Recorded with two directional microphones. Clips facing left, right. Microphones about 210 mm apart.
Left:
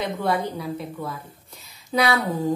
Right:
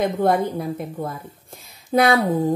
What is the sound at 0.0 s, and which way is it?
A woman's voice, 50° right (ahead or behind).